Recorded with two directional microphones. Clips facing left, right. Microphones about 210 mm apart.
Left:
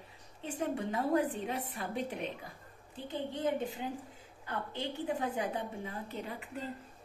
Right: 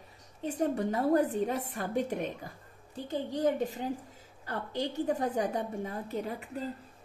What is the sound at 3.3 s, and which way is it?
A woman's voice, 40° right (ahead or behind).